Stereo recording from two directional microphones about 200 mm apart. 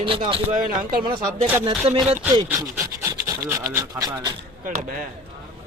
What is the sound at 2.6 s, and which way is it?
Rub, 15° right (ahead or behind).